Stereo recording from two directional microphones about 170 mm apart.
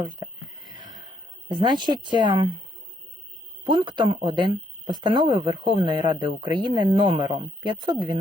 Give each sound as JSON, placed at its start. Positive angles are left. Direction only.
{"t": 1.5, "sound": "speech", "side_deg": -25}
{"t": 3.6, "sound": "speech", "side_deg": -30}